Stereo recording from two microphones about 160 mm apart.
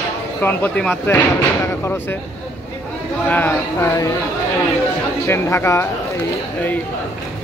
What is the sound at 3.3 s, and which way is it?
Speech, 10° left (ahead or behind).